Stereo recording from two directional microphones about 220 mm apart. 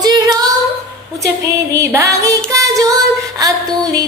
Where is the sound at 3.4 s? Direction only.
15° right (ahead or behind).